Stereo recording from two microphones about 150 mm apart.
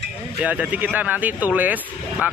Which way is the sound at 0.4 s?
10° right (ahead or behind).